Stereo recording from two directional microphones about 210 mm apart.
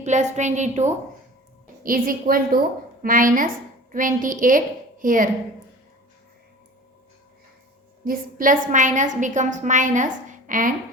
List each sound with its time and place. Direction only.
0.0 s a woman's voice: 35° right (ahead or behind)
8.0 s a woman's voice: 40° right (ahead or behind)